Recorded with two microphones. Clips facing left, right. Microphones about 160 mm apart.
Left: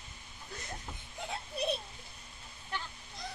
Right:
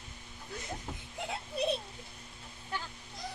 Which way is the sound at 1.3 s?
Centre (ahead or behind).